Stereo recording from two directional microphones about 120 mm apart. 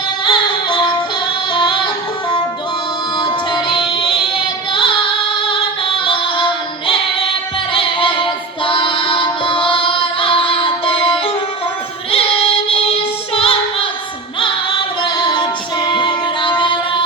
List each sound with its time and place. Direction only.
0.3 s music: 40° left (ahead or behind)
3.2 s music: 40° left (ahead or behind)
12.1 s female singing: 55° left (ahead or behind)
15.0 s female singing: 40° left (ahead or behind)